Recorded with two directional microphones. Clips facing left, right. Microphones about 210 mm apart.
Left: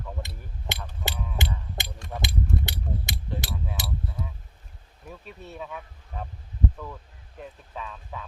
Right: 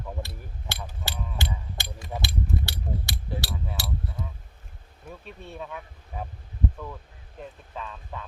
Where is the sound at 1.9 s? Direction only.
5° right (ahead or behind).